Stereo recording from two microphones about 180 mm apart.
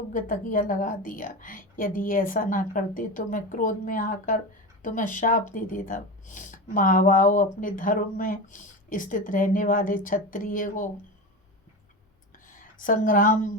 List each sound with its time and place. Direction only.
0.1 s speech: 50° left (ahead or behind)
12.5 s a woman's voice: 50° left (ahead or behind)